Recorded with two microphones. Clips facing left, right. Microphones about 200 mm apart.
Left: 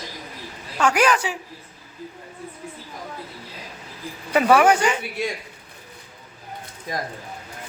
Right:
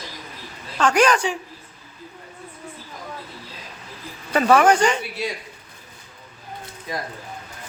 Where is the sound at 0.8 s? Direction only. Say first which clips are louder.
Right 2 dB; 10° left (ahead or behind).